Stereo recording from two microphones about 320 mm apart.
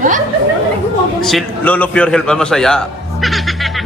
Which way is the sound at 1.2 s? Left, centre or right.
Centre.